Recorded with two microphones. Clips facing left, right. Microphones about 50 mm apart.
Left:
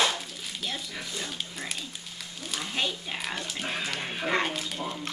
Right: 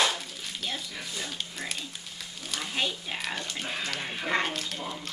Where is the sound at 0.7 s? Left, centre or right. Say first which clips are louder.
Left 1 dB; centre.